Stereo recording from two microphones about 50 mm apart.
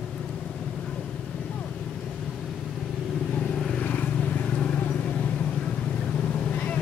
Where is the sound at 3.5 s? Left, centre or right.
Centre.